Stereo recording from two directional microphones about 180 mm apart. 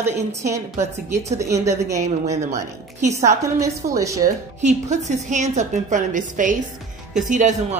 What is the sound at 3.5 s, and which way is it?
Speech, 15° right (ahead or behind).